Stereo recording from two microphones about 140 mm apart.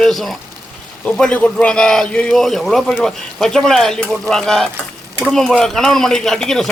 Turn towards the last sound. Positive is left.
turn(degrees=5)  # may be behind; listen again after turning